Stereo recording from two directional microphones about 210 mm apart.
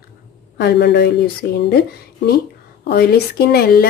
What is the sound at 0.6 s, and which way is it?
Speech, 50° left (ahead or behind).